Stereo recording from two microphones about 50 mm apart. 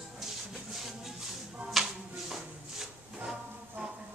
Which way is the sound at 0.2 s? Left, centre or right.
Centre.